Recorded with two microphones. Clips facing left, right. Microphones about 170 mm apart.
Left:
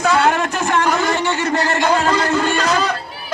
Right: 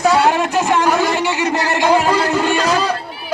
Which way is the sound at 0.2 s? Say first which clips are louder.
Right 2 dB; 15° right (ahead or behind).